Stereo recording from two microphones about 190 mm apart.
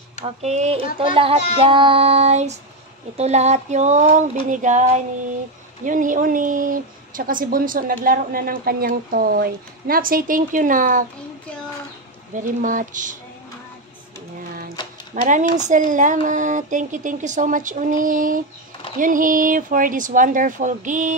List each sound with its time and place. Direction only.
0.2 s a sound: 35° right (ahead or behind)
0.9 s child singing: 25° right (ahead or behind)
3.2 s a sound: 35° right (ahead or behind)
5.9 s a woman's voice: 45° right (ahead or behind)
12.4 s a woman's voice: 45° right (ahead or behind)
15.2 s a woman's voice: 40° right (ahead or behind)